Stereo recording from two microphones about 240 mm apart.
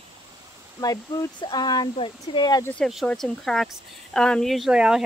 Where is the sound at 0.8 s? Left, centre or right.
Centre.